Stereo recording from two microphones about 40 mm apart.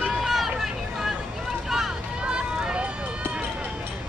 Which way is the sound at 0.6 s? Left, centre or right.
Centre.